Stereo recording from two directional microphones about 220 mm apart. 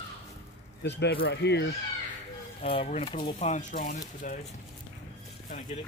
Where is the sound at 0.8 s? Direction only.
50° left (ahead or behind).